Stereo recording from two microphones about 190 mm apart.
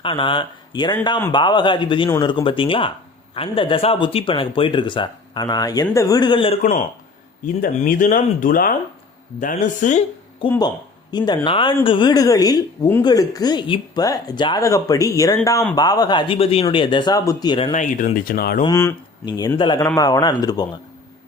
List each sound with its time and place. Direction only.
0.0 s a woman's voice: 25° left (ahead or behind)
6.6 s speech: 40° left (ahead or behind)
11.1 s a woman's voice: 25° left (ahead or behind)
17.7 s speech: 40° left (ahead or behind)
18.6 s a woman's voice: 15° left (ahead or behind)